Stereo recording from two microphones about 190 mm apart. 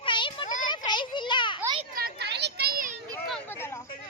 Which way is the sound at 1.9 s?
55° right (ahead or behind).